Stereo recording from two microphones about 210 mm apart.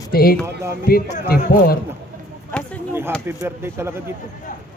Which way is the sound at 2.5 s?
5° left (ahead or behind).